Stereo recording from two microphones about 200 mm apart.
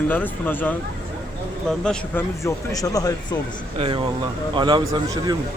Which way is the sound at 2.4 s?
15° left (ahead or behind).